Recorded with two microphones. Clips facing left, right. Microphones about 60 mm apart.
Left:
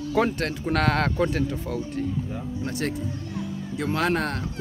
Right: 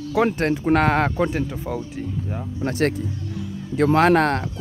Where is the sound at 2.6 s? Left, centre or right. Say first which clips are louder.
Right 8 dB; right.